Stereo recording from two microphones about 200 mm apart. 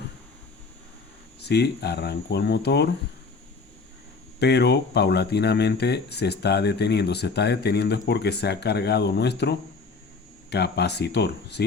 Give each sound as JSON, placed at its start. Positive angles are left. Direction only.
{"t": 1.4, "sound": "speech", "side_deg": 55}
{"t": 4.4, "sound": "speech", "side_deg": 55}